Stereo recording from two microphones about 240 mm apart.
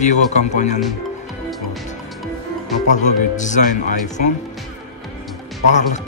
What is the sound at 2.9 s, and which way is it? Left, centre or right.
Speech, left.